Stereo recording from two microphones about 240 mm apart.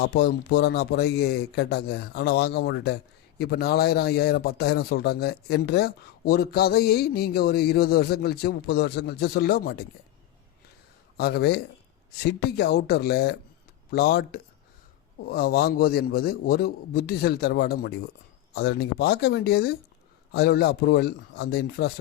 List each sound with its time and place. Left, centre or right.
0.0 s speech: left
11.2 s speech: left